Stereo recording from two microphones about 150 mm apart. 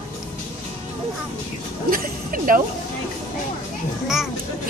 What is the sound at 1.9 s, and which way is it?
Speech, 70° right (ahead or behind).